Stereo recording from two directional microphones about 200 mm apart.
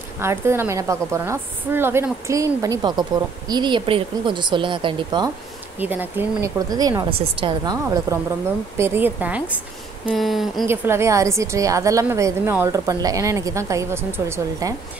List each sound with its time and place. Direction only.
0.2 s a woman's voice: 10° right (ahead or behind)
5.8 s a woman's voice: 10° right (ahead or behind)
10.0 s a sound: centre (ahead or behind)
10.7 s a woman's voice: 15° right (ahead or behind)